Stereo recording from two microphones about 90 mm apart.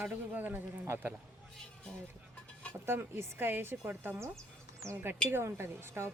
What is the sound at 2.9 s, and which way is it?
Speech, 25° right (ahead or behind).